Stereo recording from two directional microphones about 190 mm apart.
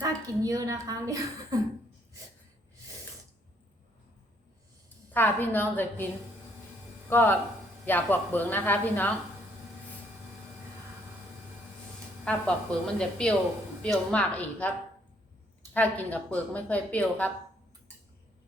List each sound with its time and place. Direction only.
0.0 s a woman's voice: 15° right (ahead or behind)
5.1 s a woman's voice: 10° left (ahead or behind)
7.1 s a woman's voice: 10° left (ahead or behind)
12.2 s a woman's voice: 5° left (ahead or behind)
15.7 s a woman's voice: 10° left (ahead or behind)